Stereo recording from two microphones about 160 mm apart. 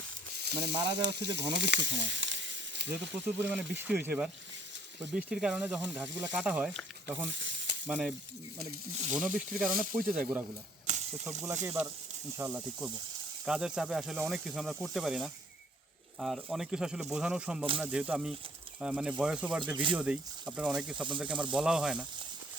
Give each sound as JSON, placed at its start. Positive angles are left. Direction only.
{"t": 0.3, "sound": "sizzle", "side_deg": -90}
{"t": 2.9, "sound": "speech", "side_deg": -10}
{"t": 9.0, "sound": "speech", "side_deg": -45}
{"t": 10.1, "sound": "speech", "side_deg": -5}
{"t": 10.8, "sound": "typewriter", "side_deg": -45}
{"t": 11.6, "sound": "speech", "side_deg": -15}